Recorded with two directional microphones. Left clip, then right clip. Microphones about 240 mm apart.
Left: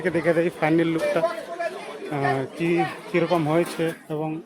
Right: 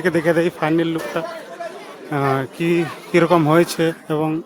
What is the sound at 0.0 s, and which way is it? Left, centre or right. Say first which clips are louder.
Speech: right 4 dB; right.